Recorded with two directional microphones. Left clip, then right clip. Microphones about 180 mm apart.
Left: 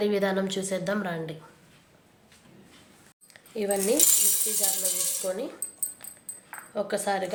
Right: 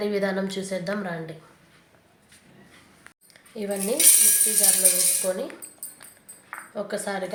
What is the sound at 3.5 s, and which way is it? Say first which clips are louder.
Speech: left 2 dB; 15° left (ahead or behind).